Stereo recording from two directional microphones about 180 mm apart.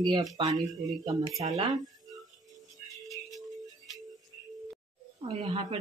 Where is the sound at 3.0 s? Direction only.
Centre (ahead or behind).